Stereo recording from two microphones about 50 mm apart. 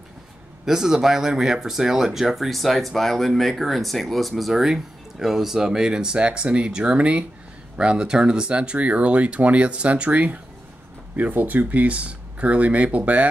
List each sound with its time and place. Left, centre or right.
0.7 s speech: centre; by 13.3 s right